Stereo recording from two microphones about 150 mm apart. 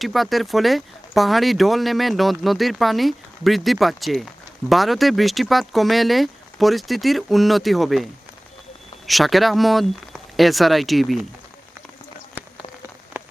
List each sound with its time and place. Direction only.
0.0 s speech: centre (ahead or behind)
9.0 s speech: centre (ahead or behind)
13.2 s rain on surface: 15° right (ahead or behind)